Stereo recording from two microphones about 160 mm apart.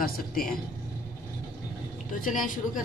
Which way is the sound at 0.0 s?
65° left (ahead or behind).